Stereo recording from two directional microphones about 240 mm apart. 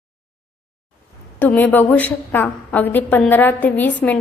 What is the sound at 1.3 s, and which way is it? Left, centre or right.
A woman's voice, centre.